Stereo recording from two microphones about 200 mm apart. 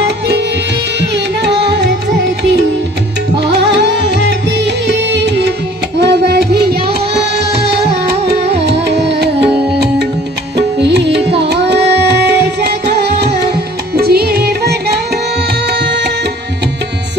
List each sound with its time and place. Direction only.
1.1 s carnatic music: 60° right (ahead or behind)
3.3 s music: 60° right (ahead or behind)
13.9 s music: 50° right (ahead or behind)
15.7 s tabla: 60° right (ahead or behind)